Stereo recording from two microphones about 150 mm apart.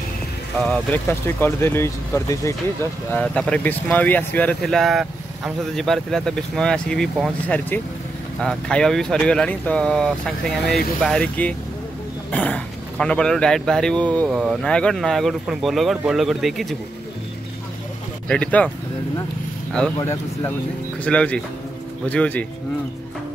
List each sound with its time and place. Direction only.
0.9 s speech: 15° left (ahead or behind)
3.1 s speech: 10° left (ahead or behind)
18.3 s speech: 10° left (ahead or behind)
21.0 s speech: 10° left (ahead or behind)